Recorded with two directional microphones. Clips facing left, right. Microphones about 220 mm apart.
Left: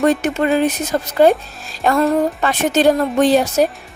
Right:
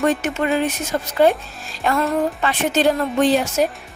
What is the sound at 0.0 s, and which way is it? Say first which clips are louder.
A woman's voice: left 4 dB; 35° left (ahead or behind).